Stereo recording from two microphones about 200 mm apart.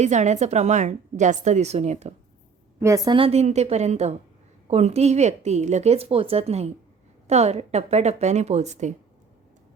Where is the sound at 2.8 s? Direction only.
15° right (ahead or behind).